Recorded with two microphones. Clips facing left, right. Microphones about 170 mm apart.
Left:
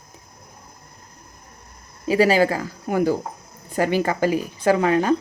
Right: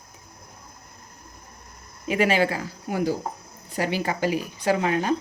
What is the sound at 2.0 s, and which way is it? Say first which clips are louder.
A woman's voice: left 5 dB; 35° left (ahead or behind).